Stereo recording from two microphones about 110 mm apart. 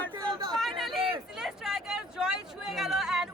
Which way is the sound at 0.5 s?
Centre (ahead or behind).